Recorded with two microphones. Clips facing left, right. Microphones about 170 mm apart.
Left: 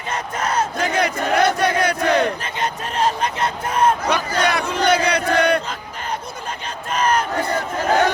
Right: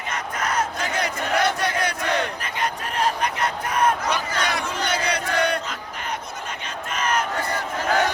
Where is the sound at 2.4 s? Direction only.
25° left (ahead or behind).